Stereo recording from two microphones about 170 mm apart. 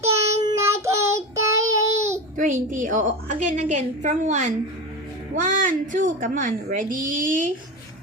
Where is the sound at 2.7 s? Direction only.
50° right (ahead or behind).